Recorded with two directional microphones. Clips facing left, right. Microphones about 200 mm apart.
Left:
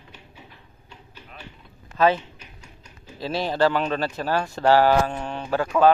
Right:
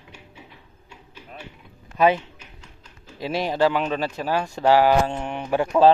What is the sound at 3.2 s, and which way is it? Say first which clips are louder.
Speech: right 1 dB; 15° right (ahead or behind).